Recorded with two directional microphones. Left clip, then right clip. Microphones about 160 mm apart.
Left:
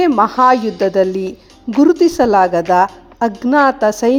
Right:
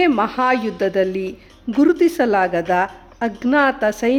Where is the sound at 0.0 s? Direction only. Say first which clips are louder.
Left 6 dB; 15° left (ahead or behind).